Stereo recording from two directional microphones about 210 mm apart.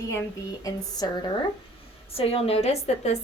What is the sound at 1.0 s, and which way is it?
A woman's voice, 20° left (ahead or behind).